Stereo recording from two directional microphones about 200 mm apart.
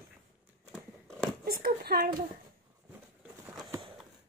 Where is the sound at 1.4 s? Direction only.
45° right (ahead or behind).